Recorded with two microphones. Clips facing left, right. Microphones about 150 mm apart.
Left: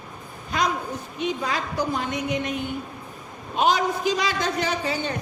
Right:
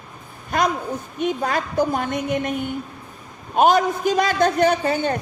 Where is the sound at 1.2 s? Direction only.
50° right (ahead or behind).